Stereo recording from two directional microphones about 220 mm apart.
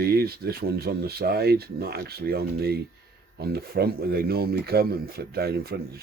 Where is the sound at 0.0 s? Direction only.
45° right (ahead or behind).